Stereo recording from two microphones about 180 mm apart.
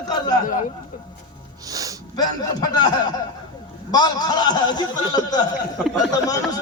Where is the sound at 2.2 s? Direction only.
20° left (ahead or behind).